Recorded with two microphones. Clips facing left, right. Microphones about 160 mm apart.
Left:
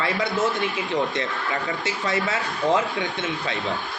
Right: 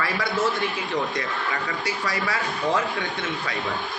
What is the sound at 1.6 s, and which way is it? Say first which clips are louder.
Speech: left 1 dB; 25° left (ahead or behind).